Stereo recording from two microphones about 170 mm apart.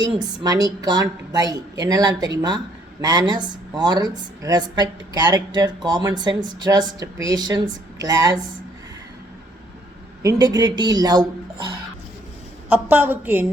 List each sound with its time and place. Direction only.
0.0 s speech: 25° right (ahead or behind)
10.2 s speech: 25° right (ahead or behind)
12.6 s a woman's voice: 10° right (ahead or behind)